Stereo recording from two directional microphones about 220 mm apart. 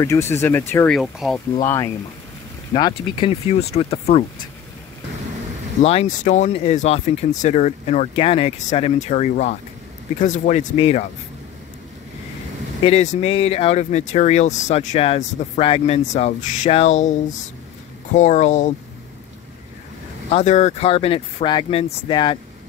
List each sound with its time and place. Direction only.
0.0 s speech: 10° left (ahead or behind)
1.6 s speech: 15° left (ahead or behind)
2.7 s speech: 25° left (ahead or behind)
5.8 s speech: 30° left (ahead or behind)
12.8 s speech: 30° left (ahead or behind)
18.1 s speech: 30° left (ahead or behind)
20.2 s speech: 30° left (ahead or behind)